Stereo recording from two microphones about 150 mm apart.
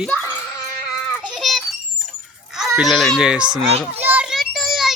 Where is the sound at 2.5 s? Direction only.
5° right (ahead or behind).